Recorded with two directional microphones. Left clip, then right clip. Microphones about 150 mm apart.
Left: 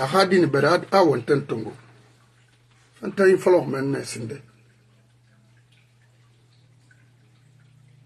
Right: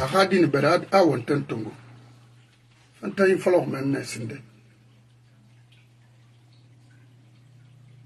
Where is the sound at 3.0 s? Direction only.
10° left (ahead or behind).